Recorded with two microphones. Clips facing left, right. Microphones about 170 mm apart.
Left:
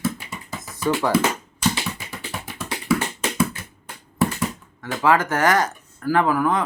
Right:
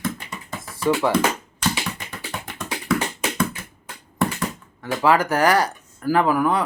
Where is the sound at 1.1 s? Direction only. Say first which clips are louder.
Even; 5° left (ahead or behind).